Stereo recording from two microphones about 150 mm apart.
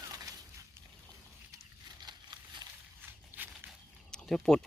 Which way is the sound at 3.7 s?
5° left (ahead or behind).